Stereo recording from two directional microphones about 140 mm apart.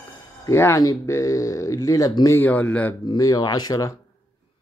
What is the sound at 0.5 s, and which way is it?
Speech, 20° left (ahead or behind).